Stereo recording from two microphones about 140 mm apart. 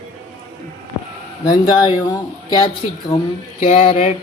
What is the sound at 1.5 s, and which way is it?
Speech, 35° left (ahead or behind).